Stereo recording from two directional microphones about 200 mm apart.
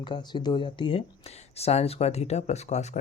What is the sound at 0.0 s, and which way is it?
Speech, 20° left (ahead or behind).